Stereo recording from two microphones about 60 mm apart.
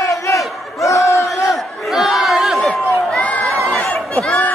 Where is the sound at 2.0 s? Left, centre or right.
Centre.